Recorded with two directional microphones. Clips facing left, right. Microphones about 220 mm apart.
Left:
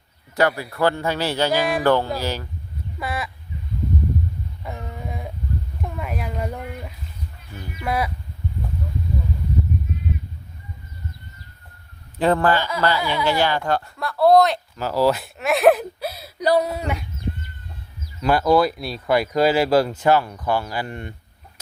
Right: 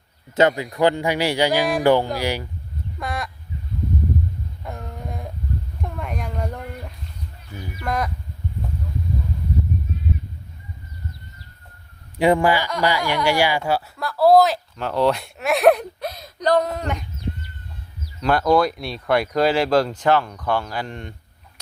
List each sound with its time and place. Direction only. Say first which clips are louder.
0.3 s speech: right 3 dB; 20° right (ahead or behind)
3.0 s a sound: left 1 dB; 5° left (ahead or behind)
4.6 s a sound: left 1 dB; centre (ahead or behind)
7.8 s speech: left 1 dB; 5° left (ahead or behind)
12.2 s speech: right 1 dB; 10° right (ahead or behind); by 17.0 s 10° left (ahead or behind)
18.2 s speech: left 1 dB; 5° left (ahead or behind)